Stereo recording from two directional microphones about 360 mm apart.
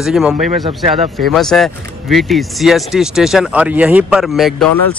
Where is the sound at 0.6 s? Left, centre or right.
Centre.